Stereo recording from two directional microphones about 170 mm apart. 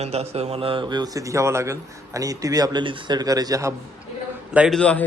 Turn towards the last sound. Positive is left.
turn(degrees=5)  # may be behind; listen again after turning